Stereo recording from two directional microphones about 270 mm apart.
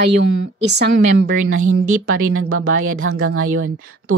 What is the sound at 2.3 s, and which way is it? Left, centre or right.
Speech, right.